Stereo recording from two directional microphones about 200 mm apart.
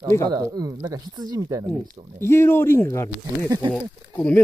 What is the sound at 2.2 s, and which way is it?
Speech, 10° left (ahead or behind).